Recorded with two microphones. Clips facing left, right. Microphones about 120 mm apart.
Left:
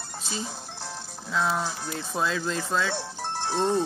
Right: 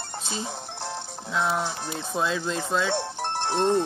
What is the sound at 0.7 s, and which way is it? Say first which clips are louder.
Music: right 5 dB; 60° right (ahead or behind).